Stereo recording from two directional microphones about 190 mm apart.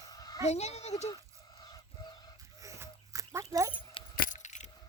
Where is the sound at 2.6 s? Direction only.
15° right (ahead or behind).